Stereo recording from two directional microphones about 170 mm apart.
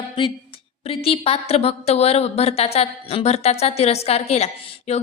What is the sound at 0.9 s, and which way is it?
A woman's voice, 35° left (ahead or behind).